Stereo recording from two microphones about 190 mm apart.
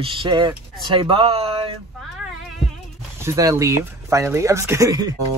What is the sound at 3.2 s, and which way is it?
Speech, 15° right (ahead or behind).